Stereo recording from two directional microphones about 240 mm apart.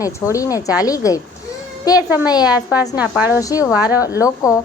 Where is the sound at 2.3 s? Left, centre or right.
Centre.